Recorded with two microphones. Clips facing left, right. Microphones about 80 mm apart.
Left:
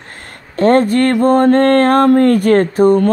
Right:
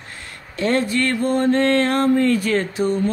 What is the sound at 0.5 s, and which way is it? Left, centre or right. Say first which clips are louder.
Music: left 9 dB; left.